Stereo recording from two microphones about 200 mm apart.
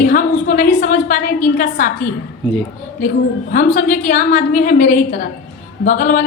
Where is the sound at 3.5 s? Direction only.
40° left (ahead or behind).